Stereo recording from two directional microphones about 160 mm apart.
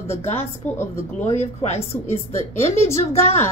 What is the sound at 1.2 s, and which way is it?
A woman's voice, 40° left (ahead or behind).